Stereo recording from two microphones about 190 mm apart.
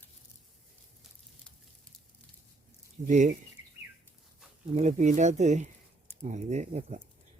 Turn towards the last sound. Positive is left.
turn(degrees=-35)  # may be behind; listen again after turning